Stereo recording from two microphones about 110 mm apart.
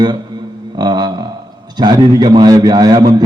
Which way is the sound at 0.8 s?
40° right (ahead or behind).